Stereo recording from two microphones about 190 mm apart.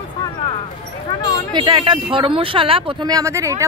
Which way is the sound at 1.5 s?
25° right (ahead or behind).